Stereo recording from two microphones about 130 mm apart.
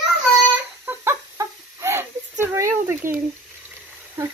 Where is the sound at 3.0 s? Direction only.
90° right.